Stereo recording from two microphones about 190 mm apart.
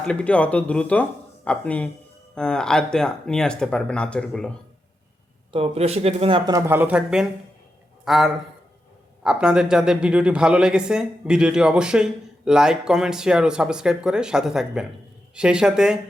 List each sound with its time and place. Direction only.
0.0 s speech: 5° left (ahead or behind)
5.5 s a man's voice: 30° right (ahead or behind); by 16.0 s 5° right (ahead or behind)